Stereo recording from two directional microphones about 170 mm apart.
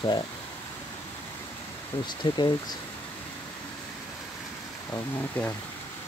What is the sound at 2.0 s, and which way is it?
Speech, 25° left (ahead or behind).